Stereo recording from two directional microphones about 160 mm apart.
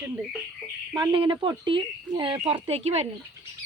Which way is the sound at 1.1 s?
30° right (ahead or behind).